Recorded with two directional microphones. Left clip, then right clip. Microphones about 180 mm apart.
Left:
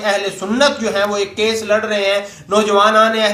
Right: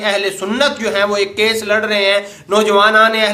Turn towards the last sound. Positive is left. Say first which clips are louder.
# right 1 dB
turn(degrees=-15)  # may be behind; listen again after turning